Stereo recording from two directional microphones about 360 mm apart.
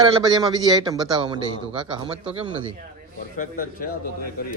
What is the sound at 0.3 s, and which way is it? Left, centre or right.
A man's voice, centre.